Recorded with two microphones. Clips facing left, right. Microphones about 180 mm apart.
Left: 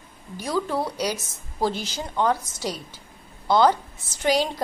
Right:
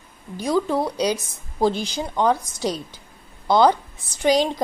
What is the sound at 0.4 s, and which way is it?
A woman's voice, 15° right (ahead or behind).